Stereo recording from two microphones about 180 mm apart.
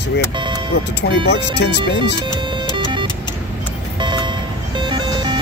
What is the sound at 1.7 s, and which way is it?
Speech, 25° right (ahead or behind).